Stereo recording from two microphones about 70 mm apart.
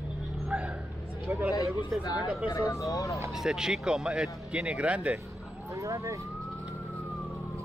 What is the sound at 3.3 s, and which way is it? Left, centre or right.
Speech, centre.